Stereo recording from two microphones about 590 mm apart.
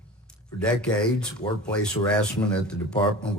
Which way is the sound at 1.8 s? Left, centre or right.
Centre.